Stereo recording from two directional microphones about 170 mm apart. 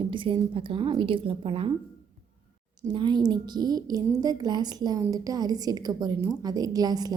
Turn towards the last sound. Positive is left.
turn(degrees=-25)  # may be behind; listen again after turning